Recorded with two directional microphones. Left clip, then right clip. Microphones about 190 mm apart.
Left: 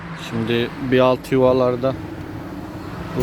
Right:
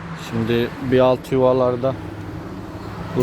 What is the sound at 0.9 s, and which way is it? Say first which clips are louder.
Speech: even; 10° left (ahead or behind).